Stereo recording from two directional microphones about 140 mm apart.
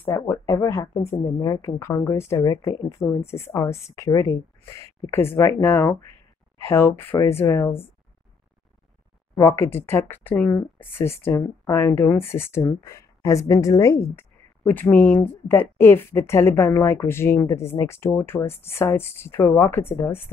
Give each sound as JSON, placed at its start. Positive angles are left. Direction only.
{"t": 0.0, "sound": "speech", "side_deg": 20}
{"t": 9.3, "sound": "speech", "side_deg": 20}